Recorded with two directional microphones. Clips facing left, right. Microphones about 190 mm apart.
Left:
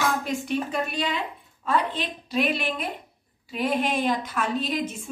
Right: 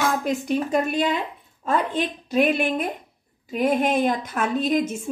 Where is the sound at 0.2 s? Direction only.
45° right (ahead or behind).